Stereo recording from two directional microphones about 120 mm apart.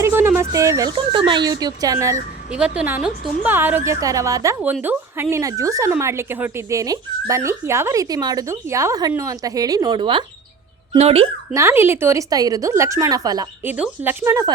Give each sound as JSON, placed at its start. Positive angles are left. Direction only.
{"t": 0.0, "sound": "speech", "side_deg": -20}
{"t": 0.9, "sound": "speech", "side_deg": -45}
{"t": 2.5, "sound": "a woman's voice", "side_deg": -10}
{"t": 4.0, "sound": "speech", "side_deg": -30}
{"t": 4.6, "sound": "speech", "side_deg": -15}
{"t": 10.9, "sound": "speech", "side_deg": -60}
{"t": 11.5, "sound": "speech", "side_deg": -20}
{"t": 13.7, "sound": "a woman's voice", "side_deg": -15}